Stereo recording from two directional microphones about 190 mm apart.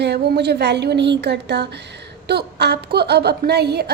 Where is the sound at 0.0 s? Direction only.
60° right (ahead or behind).